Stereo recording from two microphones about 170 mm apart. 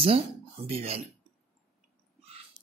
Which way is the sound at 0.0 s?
35° right (ahead or behind).